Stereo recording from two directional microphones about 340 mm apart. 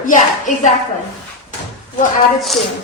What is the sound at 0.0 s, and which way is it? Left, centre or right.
Speech, left.